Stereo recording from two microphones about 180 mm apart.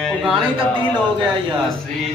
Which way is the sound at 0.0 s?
Centre (ahead or behind).